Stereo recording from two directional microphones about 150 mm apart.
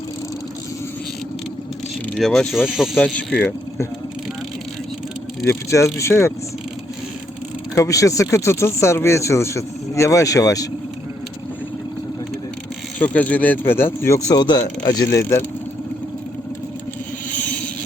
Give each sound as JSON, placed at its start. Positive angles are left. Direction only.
{"t": 2.1, "sound": "speech", "side_deg": 0}
{"t": 2.9, "sound": "speech", "side_deg": 10}
{"t": 5.5, "sound": "speech", "side_deg": 20}
{"t": 7.8, "sound": "speech", "side_deg": 20}
{"t": 13.0, "sound": "speech", "side_deg": 10}
{"t": 14.3, "sound": "speech", "side_deg": 30}